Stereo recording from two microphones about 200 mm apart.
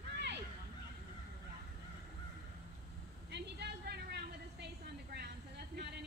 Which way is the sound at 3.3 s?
55° right (ahead or behind).